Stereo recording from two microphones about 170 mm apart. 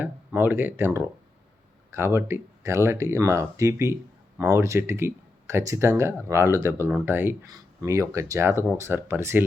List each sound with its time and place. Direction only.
0.0 s speech: 10° right (ahead or behind)